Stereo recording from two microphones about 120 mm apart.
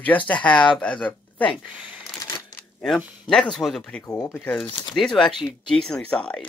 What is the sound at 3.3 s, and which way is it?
Speech, centre (ahead or behind).